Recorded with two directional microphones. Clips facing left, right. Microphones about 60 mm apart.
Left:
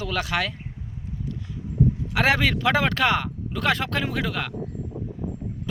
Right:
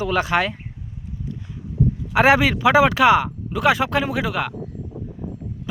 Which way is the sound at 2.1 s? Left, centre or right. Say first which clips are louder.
Right 7 dB; centre.